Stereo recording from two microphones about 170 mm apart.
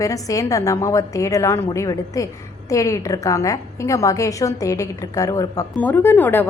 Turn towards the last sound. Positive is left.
turn(degrees=10)  # may be behind; listen again after turning